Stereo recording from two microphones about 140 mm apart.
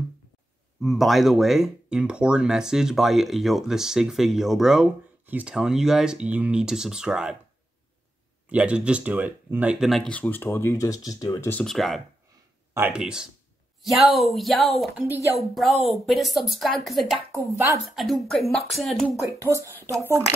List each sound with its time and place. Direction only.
0.8 s speech: centre (ahead or behind)
8.5 s speech: 10° right (ahead or behind)
9.8 s speech: 5° left (ahead or behind); by 11.4 s 25° left (ahead or behind)
11.6 s speech: centre (ahead or behind)
12.7 s speech: 10° right (ahead or behind)
17.3 s speech: 20° right (ahead or behind)
17.9 s speech: centre (ahead or behind)
19.3 s speech: 20° right (ahead or behind)